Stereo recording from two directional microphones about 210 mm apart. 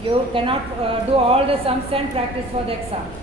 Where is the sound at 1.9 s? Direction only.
25° right (ahead or behind).